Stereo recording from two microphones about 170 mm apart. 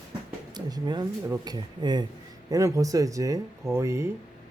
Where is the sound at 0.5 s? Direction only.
25° right (ahead or behind).